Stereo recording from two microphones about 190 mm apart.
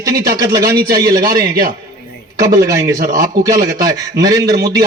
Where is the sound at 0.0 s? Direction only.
20° right (ahead or behind).